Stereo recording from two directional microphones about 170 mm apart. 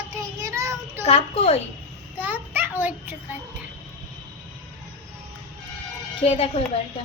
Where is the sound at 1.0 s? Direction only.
35° left (ahead or behind).